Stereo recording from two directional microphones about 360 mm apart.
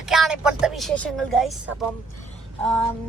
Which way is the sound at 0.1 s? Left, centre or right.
Centre.